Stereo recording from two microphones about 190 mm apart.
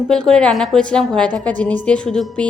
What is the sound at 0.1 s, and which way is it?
A woman's voice, 5° left (ahead or behind).